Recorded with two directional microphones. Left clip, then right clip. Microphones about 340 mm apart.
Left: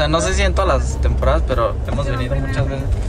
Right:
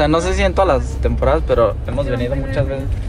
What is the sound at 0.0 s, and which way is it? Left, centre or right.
A man's voice, centre.